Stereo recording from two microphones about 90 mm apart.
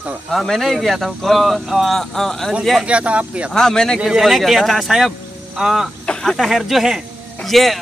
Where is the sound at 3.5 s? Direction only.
5° left (ahead or behind).